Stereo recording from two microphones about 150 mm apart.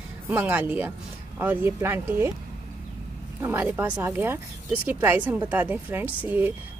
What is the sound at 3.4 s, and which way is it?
Speech, 15° right (ahead or behind).